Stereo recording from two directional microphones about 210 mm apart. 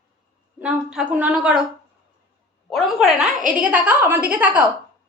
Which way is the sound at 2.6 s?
Centre (ahead or behind).